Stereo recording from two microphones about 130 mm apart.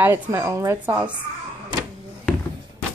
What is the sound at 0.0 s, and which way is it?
Speech, 20° right (ahead or behind).